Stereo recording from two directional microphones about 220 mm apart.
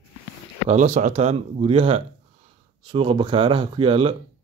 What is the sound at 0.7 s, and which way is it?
Speech, 30° right (ahead or behind).